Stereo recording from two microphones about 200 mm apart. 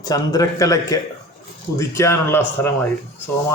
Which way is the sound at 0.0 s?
15° left (ahead or behind).